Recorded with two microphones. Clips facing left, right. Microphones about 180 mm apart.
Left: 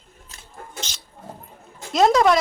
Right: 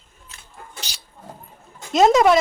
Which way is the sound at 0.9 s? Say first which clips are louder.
Even; 35° right (ahead or behind).